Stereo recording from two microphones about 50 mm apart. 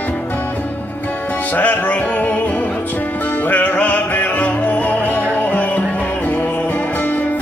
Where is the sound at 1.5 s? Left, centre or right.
Left.